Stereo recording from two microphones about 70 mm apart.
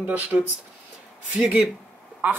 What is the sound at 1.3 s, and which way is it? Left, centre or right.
Speech, centre.